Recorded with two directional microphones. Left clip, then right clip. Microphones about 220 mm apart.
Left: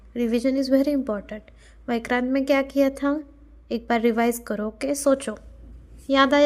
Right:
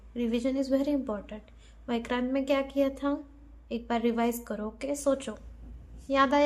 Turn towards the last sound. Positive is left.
turn(degrees=30)  # may be behind; listen again after turning